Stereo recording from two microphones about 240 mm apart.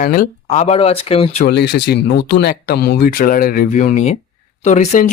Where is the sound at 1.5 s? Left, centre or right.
Left.